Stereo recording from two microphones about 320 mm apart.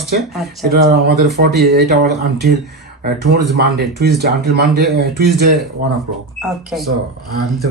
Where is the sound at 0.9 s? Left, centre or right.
Right.